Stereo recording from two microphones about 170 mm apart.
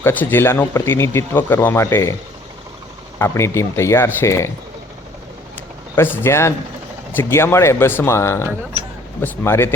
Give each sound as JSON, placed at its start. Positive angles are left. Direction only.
{"t": 0.0, "sound": "speech", "side_deg": 10}
{"t": 3.2, "sound": "speech", "side_deg": 15}
{"t": 6.0, "sound": "speech", "side_deg": 15}